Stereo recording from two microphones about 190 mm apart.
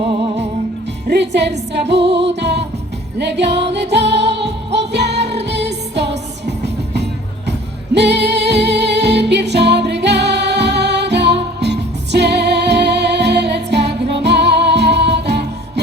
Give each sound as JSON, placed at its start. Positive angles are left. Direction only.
{"t": 1.0, "sound": "music", "side_deg": -65}